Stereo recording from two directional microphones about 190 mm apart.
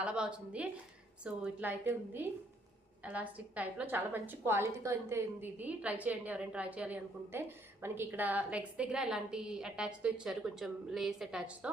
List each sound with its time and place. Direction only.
0.0 s a woman's voice: 5° right (ahead or behind)